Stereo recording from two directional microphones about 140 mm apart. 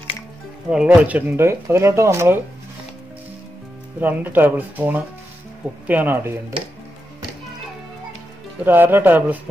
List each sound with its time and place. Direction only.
0.7 s speech: 5° right (ahead or behind)
4.0 s speech: 15° right (ahead or behind)
8.6 s speech: 15° right (ahead or behind)